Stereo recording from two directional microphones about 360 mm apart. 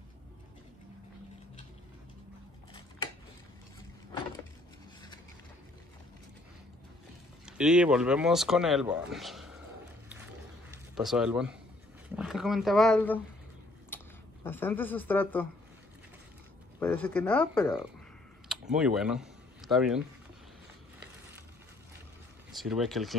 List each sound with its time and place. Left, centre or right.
7.4 s speech: centre
10.7 s speech: centre
13.8 s a sound: centre
16.8 s speech: centre
22.5 s speech: centre